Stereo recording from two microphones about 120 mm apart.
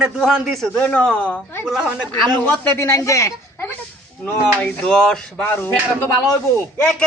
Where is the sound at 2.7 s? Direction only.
25° left (ahead or behind).